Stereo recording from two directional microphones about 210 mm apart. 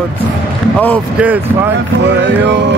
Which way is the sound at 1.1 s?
5° right (ahead or behind).